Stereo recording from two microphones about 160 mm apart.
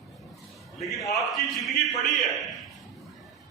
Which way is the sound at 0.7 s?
Centre (ahead or behind).